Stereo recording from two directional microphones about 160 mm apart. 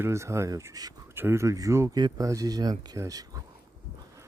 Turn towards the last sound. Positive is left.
turn(degrees=-20)  # may be behind; listen again after turning